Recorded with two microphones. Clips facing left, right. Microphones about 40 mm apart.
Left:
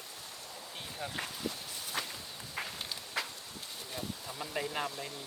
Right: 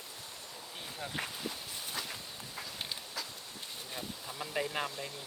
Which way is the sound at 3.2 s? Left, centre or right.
Left.